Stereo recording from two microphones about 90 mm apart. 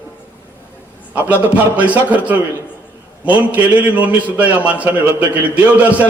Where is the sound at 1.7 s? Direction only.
15° right (ahead or behind).